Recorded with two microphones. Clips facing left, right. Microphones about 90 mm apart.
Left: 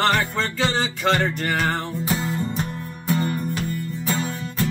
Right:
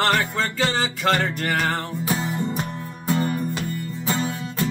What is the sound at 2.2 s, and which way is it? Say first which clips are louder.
Music: even; 20° right (ahead or behind).